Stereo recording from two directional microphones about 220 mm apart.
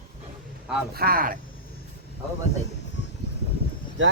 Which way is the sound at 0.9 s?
45° right (ahead or behind).